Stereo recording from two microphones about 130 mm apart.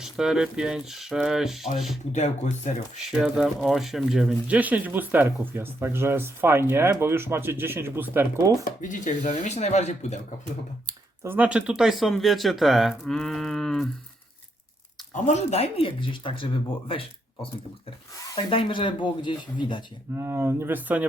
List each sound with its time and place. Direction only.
0.0 s speech: 5° right (ahead or behind)
2.1 s speech: 65° left (ahead or behind)
3.1 s speech: 5° right (ahead or behind)
8.6 s speech: 80° left
9.4 s speech: 60° left (ahead or behind)
10.8 s speech: 20° right (ahead or behind); by 13.9 s centre (ahead or behind)
15.1 s speech: 60° left (ahead or behind); by 16.5 s 40° left (ahead or behind)
18.3 s speech: 40° left (ahead or behind)
20.1 s speech: 20° right (ahead or behind)